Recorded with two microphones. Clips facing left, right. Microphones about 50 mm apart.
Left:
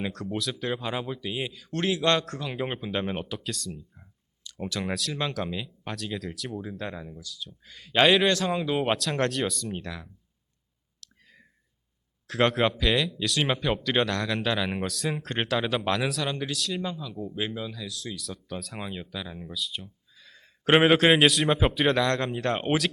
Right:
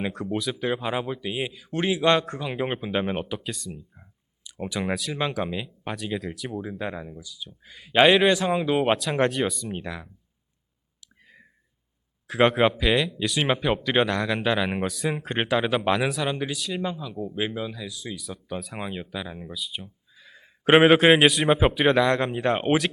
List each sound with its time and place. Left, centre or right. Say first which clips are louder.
0.0 s a man's voice: right 3 dB; centre
11.0 s clicking: right 2 dB; centre
12.3 s a man's voice: right 4 dB; centre